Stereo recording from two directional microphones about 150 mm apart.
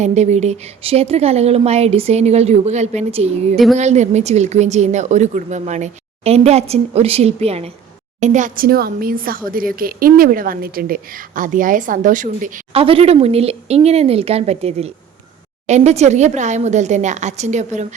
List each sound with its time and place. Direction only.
0.0 s a woman's voice: 50° right (ahead or behind)
3.5 s speech: centre (ahead or behind)
3.8 s a woman's voice: 50° right (ahead or behind)
8.2 s speech: 55° right (ahead or behind)
12.7 s a woman's voice: 40° right (ahead or behind)